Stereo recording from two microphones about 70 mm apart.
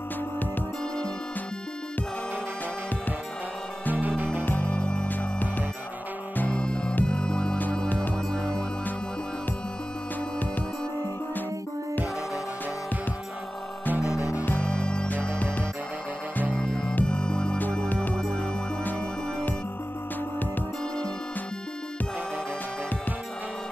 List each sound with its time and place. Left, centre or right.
4.2 s music: right
4.5 s music: left
13.9 s music: right
14.4 s music: left
16.5 s music: centre
17.8 s music: left
18.1 s music: centre